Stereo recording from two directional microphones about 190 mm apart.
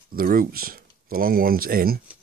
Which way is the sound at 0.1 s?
50° right (ahead or behind).